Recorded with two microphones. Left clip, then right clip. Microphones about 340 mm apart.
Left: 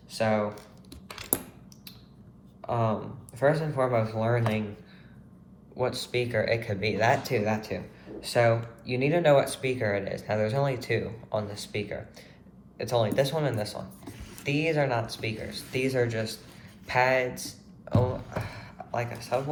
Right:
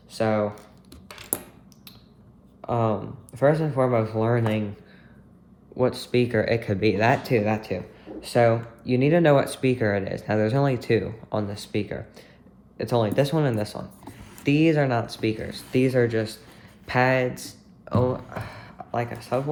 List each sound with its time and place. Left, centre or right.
0.1 s speech: right
2.6 s speech: right
5.7 s speech: right
16.8 s a sound: right